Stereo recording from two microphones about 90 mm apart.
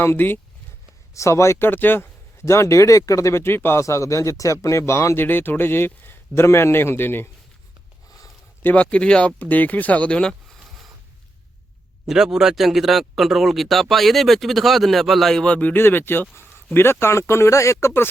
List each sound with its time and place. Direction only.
0.0 s speech: 25° left (ahead or behind)
8.6 s speech: 15° left (ahead or behind)
12.0 s speech: 5° right (ahead or behind); by 18.1 s 25° left (ahead or behind)